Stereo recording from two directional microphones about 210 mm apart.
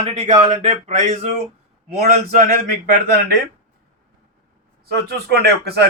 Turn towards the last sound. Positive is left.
turn(degrees=-50)  # may be behind; listen again after turning